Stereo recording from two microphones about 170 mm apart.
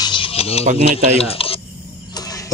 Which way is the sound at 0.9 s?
35° left (ahead or behind).